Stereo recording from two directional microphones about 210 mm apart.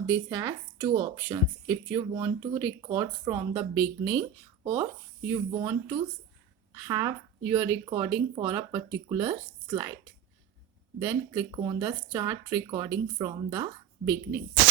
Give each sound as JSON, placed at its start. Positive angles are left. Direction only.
{"t": 0.1, "sound": "speech", "side_deg": -15}
{"t": 11.0, "sound": "speech", "side_deg": -15}